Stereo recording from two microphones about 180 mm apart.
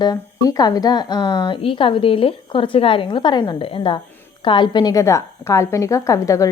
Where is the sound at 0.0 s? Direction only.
20° left (ahead or behind).